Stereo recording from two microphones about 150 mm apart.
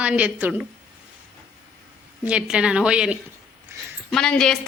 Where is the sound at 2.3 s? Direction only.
5° right (ahead or behind).